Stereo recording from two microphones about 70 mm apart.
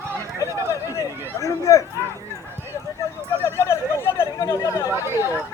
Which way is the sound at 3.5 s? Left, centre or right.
Left.